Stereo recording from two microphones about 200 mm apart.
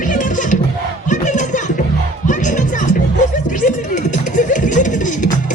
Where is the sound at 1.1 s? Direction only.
40° left (ahead or behind).